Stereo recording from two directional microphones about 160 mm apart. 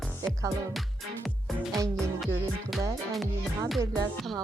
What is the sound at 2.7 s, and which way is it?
Music, centre (ahead or behind).